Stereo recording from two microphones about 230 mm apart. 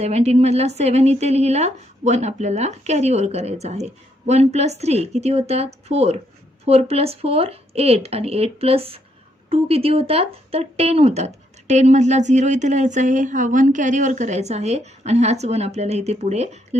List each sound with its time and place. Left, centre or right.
0.0 s a woman's voice: right